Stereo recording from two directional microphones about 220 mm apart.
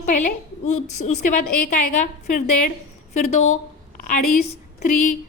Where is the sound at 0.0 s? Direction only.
35° left (ahead or behind).